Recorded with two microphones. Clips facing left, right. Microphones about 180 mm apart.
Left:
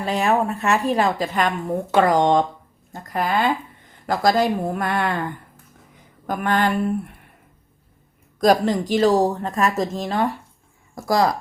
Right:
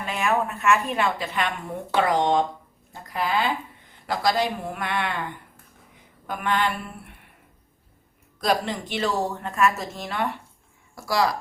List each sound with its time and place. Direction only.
0.0 s a woman's voice: 35° left (ahead or behind)
8.4 s a woman's voice: 45° left (ahead or behind)